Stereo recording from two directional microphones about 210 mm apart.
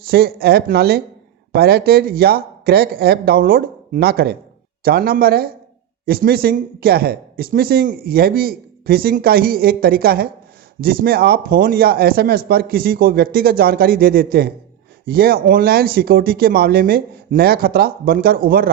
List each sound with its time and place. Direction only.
0.1 s speech: 45° right (ahead or behind)